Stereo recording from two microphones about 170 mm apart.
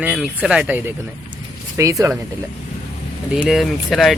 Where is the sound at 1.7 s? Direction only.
20° right (ahead or behind).